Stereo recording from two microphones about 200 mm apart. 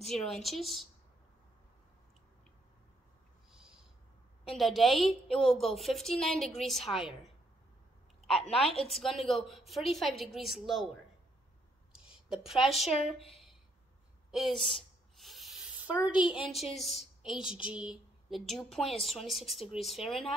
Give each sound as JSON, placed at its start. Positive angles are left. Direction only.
{"t": 0.1, "sound": "a woman's voice", "side_deg": 0}
{"t": 3.5, "sound": "a sound", "side_deg": -5}
{"t": 4.5, "sound": "a woman's voice", "side_deg": 0}
{"t": 8.3, "sound": "a woman's voice", "side_deg": 0}
{"t": 8.6, "sound": "a woman's voice", "side_deg": 30}
{"t": 8.9, "sound": "a woman's voice", "side_deg": 0}
{"t": 12.1, "sound": "a woman's voice", "side_deg": -5}
{"t": 14.6, "sound": "a sound", "side_deg": 0}
{"t": 16.2, "sound": "a woman's voice", "side_deg": 25}
{"t": 16.7, "sound": "a woman's voice", "side_deg": 0}